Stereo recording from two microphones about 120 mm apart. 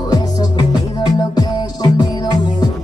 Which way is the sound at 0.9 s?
35° left (ahead or behind).